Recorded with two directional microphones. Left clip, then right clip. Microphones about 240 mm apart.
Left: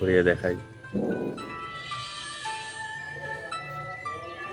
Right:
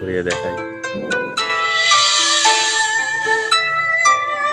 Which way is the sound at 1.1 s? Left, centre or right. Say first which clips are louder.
Right 14 dB; right.